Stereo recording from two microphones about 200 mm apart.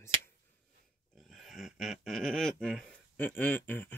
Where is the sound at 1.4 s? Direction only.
Centre (ahead or behind).